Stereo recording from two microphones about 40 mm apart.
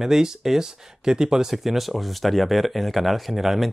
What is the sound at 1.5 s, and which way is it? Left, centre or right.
Speech, centre.